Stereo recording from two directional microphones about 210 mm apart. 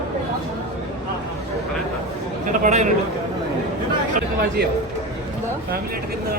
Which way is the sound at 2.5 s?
35° right (ahead or behind).